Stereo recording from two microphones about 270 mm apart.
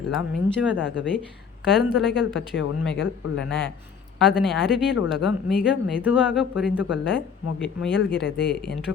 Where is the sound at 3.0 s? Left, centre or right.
Left.